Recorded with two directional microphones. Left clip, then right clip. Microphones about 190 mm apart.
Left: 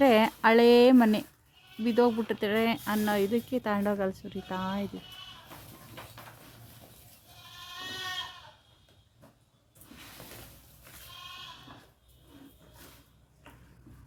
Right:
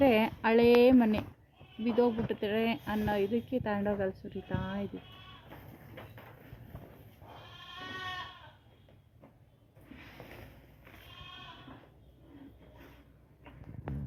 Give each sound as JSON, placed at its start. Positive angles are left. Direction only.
{"t": 0.0, "sound": "speech", "side_deg": 30}